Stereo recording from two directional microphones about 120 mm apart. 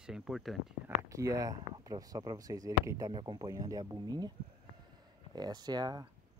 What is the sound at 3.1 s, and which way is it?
Speech, 35° right (ahead or behind).